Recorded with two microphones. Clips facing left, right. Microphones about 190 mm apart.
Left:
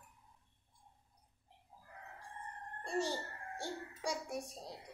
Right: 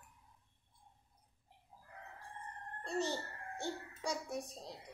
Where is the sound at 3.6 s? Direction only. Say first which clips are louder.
Even; 10° left (ahead or behind).